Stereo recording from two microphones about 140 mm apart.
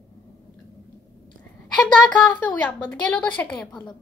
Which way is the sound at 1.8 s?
10° left (ahead or behind).